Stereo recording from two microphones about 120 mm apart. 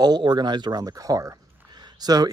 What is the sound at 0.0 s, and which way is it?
Speech, 35° right (ahead or behind).